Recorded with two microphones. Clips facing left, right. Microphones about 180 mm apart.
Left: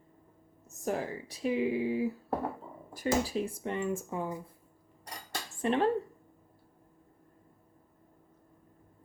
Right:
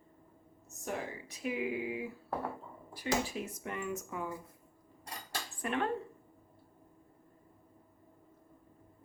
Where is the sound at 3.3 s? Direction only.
30° left (ahead or behind).